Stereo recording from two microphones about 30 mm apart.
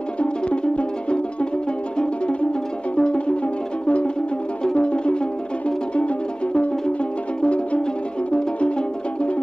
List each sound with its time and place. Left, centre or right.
0.2 s music: left
3.0 s music: left